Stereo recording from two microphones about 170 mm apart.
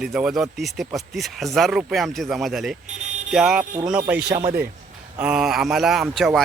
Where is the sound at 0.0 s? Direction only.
5° right (ahead or behind).